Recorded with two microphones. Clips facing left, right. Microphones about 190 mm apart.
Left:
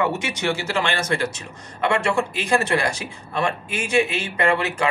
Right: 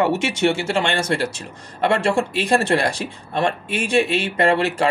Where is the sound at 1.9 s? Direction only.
30° right (ahead or behind).